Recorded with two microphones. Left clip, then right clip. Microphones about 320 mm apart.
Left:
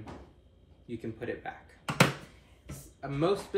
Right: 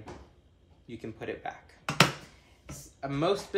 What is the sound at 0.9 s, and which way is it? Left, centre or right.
Speech, centre.